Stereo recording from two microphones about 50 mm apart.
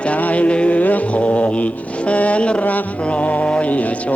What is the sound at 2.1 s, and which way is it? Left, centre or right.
Speech, left.